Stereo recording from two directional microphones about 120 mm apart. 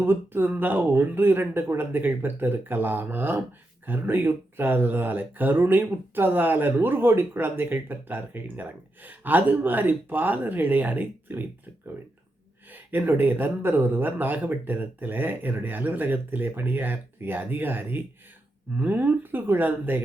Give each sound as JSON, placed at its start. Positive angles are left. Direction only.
{"t": 0.0, "sound": "speech", "side_deg": -20}
{"t": 12.7, "sound": "speech", "side_deg": -15}